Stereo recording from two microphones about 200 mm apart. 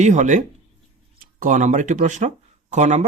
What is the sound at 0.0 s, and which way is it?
Speech, 35° right (ahead or behind).